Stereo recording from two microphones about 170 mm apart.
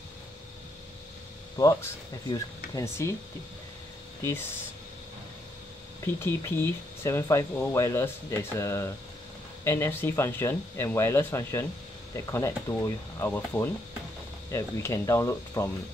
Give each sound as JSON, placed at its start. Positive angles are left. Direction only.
{"t": 1.6, "sound": "speech", "side_deg": 20}
{"t": 4.2, "sound": "speech", "side_deg": 15}
{"t": 6.1, "sound": "speech", "side_deg": 15}